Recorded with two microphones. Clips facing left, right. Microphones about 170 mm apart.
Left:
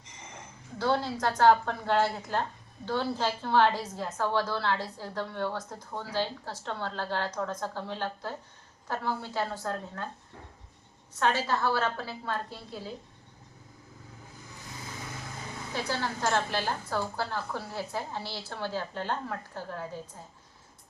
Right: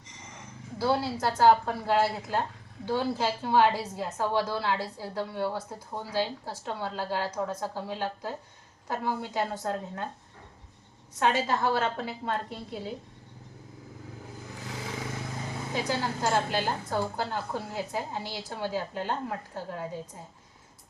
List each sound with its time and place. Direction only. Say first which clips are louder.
0.8 s a woman's voice: right 1 dB; 5° right (ahead or behind)
11.2 s a woman's voice: right 2 dB; 15° right (ahead or behind)
14.7 s vehicle: right 6 dB; 90° right
15.7 s a woman's voice: right 2 dB; 15° right (ahead or behind)